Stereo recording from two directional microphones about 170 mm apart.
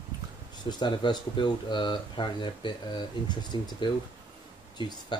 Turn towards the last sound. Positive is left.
turn(degrees=25)  # may be behind; listen again after turning